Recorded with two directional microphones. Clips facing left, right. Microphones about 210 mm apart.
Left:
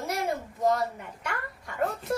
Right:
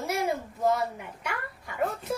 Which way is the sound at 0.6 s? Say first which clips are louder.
Left 1 dB; 5° right (ahead or behind).